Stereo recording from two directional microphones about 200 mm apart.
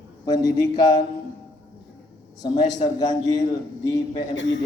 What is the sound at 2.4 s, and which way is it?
A man's voice, 20° left (ahead or behind).